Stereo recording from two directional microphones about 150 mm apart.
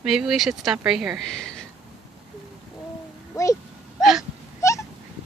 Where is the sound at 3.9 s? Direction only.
Centre (ahead or behind).